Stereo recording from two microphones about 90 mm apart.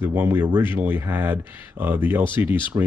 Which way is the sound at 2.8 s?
40° right (ahead or behind).